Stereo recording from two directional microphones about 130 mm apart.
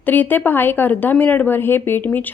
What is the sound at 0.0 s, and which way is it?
Speech, 15° left (ahead or behind).